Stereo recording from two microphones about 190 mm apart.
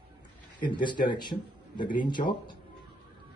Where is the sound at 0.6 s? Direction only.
25° left (ahead or behind).